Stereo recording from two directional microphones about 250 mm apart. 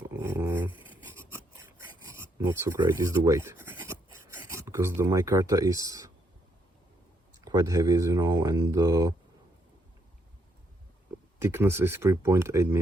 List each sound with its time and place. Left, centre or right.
0.2 s dog: centre
1.8 s filing: centre
4.3 s speech: centre
7.4 s speech: centre
11.3 s speech: centre